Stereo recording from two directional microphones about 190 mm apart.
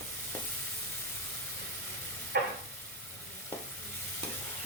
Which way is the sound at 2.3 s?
55° right (ahead or behind).